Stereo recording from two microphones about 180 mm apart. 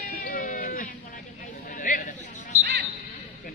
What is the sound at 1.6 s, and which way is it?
Chatter, 50° left (ahead or behind).